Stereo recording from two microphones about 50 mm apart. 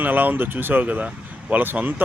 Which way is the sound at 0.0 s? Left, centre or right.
Right.